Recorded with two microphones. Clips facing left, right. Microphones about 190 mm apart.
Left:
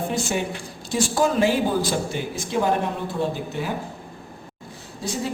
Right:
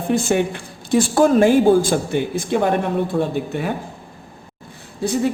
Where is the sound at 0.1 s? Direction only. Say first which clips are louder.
Right 7 dB; 55° right (ahead or behind).